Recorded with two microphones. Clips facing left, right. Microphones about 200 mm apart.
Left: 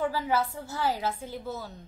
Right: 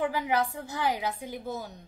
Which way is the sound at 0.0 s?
15° right (ahead or behind).